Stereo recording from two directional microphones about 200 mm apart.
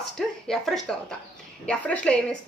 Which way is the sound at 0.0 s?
Centre (ahead or behind).